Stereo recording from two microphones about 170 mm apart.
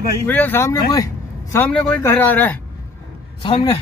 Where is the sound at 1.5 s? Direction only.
10° left (ahead or behind).